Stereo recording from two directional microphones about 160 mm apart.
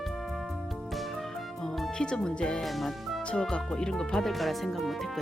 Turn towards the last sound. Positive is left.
turn(degrees=0)  # may be behind; listen again after turning